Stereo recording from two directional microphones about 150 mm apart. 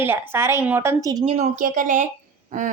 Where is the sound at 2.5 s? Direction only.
60° right (ahead or behind).